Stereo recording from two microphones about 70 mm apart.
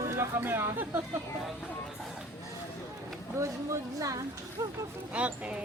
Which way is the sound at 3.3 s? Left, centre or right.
Right.